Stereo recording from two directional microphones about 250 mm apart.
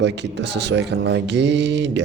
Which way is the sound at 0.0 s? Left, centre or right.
Right.